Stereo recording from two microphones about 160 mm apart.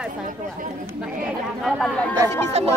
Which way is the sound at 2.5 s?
40° right (ahead or behind).